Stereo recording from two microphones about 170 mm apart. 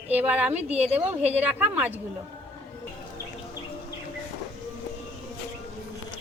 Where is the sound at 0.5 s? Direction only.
40° right (ahead or behind).